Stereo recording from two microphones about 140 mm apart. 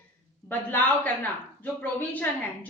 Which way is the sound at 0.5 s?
10° left (ahead or behind).